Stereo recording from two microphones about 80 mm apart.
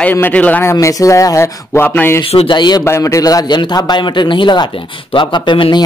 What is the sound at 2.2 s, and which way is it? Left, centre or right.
Speech, left.